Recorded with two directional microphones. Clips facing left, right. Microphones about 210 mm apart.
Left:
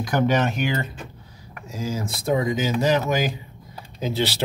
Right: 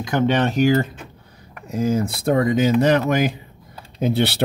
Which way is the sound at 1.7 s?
60° right (ahead or behind).